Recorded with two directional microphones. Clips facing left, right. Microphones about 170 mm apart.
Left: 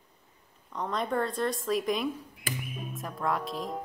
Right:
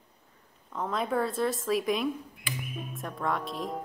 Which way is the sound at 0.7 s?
5° right (ahead or behind).